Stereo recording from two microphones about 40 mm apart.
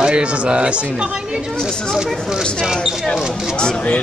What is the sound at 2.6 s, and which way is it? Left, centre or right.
Speech, centre.